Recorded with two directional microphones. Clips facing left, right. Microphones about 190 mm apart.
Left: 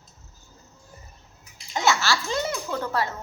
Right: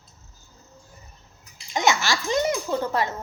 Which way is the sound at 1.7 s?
15° right (ahead or behind).